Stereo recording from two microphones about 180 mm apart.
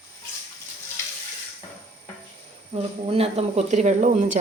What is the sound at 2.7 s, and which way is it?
Speech, 35° right (ahead or behind).